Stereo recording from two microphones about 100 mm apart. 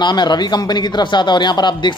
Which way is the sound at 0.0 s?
45° left (ahead or behind).